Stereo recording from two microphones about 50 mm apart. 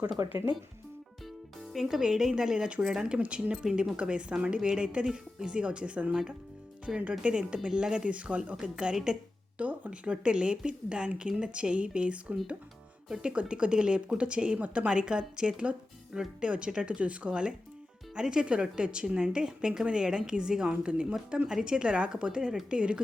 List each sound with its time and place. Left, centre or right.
0.2 s speech: right
1.7 s a woman's voice: centre
3.2 s a woman's voice: right
3.5 s a woman's voice: centre
7.2 s a woman's voice: centre
8.5 s a woman's voice: centre
9.6 s a woman's voice: right